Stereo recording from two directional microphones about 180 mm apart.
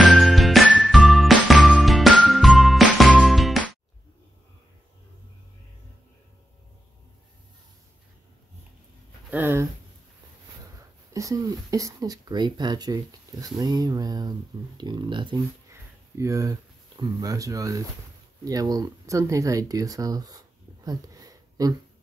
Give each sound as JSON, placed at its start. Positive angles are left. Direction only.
{"t": 0.1, "sound": "music", "side_deg": 0}
{"t": 9.3, "sound": "a sound", "side_deg": -15}
{"t": 11.1, "sound": "speech", "side_deg": -20}
{"t": 15.7, "sound": "speech", "side_deg": -15}